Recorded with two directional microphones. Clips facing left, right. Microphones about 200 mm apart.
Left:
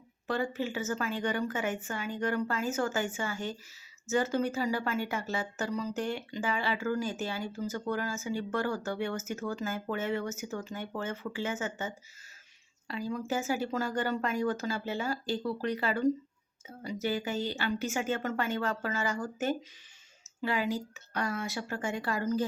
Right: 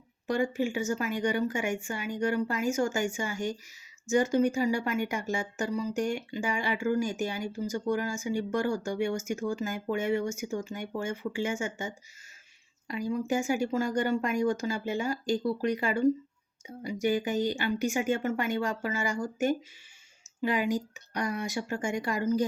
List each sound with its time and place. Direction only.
0.3 s speech: 15° right (ahead or behind)